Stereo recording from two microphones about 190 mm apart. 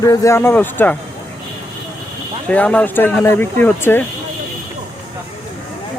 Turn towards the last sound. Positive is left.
turn(degrees=10)  # may be behind; listen again after turning